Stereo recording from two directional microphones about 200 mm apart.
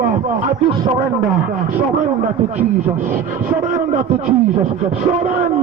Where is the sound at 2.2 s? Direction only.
40° right (ahead or behind).